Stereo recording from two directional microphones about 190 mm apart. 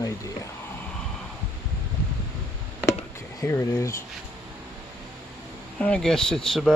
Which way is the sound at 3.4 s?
15° left (ahead or behind).